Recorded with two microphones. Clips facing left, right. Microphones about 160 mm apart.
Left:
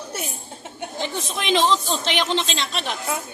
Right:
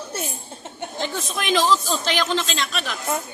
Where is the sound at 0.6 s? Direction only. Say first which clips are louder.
Even; 20° left (ahead or behind).